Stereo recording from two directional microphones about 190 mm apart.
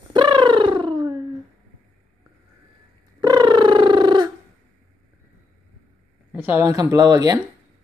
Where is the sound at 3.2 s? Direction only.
25° right (ahead or behind).